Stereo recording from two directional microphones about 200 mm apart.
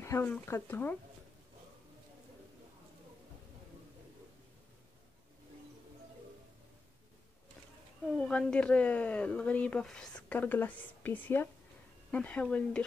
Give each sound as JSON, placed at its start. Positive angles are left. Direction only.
{"t": 0.0, "sound": "speech", "side_deg": 10}
{"t": 8.2, "sound": "speech", "side_deg": 5}